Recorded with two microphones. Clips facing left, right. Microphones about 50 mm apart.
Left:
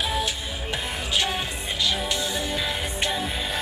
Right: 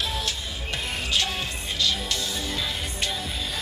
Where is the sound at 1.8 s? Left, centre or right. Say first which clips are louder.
Left 2 dB; centre.